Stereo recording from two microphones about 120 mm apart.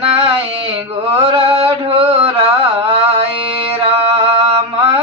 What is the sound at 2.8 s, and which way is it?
Mantra, 50° right (ahead or behind).